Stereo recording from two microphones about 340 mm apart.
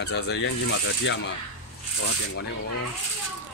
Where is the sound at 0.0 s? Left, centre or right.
Left.